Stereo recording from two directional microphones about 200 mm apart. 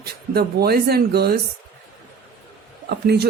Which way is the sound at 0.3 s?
50° right (ahead or behind).